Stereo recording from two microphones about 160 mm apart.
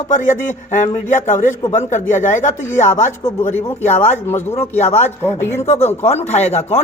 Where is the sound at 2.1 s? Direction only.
15° left (ahead or behind).